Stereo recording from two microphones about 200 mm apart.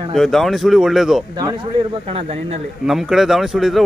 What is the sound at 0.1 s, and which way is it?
Speech, centre (ahead or behind).